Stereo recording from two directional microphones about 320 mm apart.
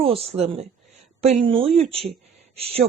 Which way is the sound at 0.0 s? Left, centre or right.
Centre.